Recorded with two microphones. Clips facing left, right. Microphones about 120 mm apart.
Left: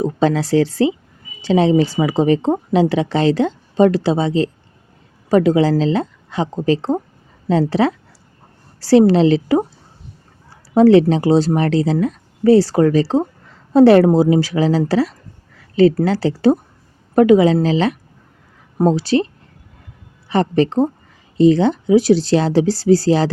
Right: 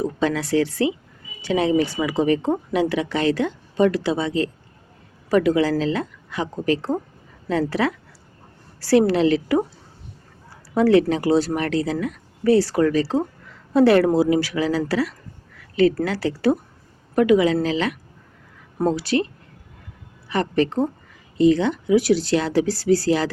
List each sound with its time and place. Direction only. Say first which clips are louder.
0.0 s a woman's voice: left 5 dB; 30° left (ahead or behind)
10.8 s a woman's voice: left 6 dB; 30° left (ahead or behind)
15.5 s a sound: left 5 dB; 30° left (ahead or behind)
16.0 s a woman's voice: left 6 dB; 30° left (ahead or behind)